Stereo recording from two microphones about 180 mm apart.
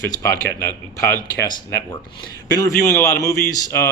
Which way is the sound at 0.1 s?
15° left (ahead or behind).